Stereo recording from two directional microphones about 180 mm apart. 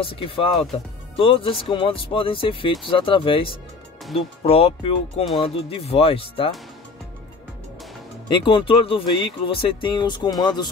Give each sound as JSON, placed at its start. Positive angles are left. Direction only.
{"t": 0.0, "sound": "speech", "side_deg": 30}
{"t": 8.3, "sound": "speech", "side_deg": 30}